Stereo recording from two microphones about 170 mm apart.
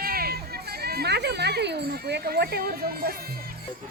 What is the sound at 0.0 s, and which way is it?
Music, 60° right (ahead or behind).